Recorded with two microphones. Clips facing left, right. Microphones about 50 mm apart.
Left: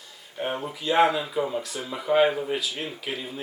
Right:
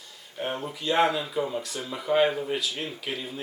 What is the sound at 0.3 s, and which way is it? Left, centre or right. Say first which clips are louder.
Speech: left 2 dB; centre.